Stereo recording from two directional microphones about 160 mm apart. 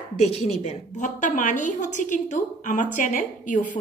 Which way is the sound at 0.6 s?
45° left (ahead or behind).